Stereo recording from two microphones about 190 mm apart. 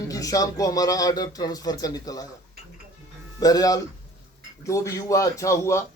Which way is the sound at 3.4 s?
20° left (ahead or behind).